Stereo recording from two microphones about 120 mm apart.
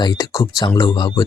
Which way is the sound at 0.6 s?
40° left (ahead or behind).